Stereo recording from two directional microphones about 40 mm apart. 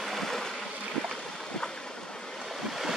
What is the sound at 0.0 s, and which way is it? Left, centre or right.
Boat, centre.